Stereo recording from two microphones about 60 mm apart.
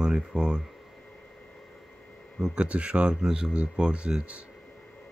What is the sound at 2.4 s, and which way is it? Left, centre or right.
Speech, centre.